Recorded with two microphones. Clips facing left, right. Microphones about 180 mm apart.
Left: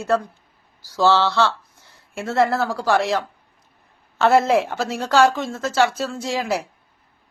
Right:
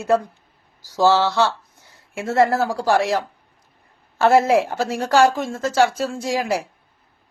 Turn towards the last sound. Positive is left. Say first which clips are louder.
# right 1 dB
turn(degrees=0)  # may be behind; listen again after turning